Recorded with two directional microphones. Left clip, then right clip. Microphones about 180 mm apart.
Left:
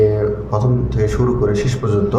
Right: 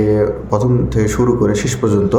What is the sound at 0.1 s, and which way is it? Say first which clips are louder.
A man's voice: right 4 dB; 65° right (ahead or behind).